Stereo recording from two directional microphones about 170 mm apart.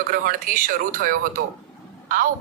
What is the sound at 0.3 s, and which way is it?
A man's voice, 55° right (ahead or behind).